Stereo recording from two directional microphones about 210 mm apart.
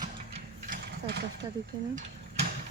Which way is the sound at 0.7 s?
55° right (ahead or behind).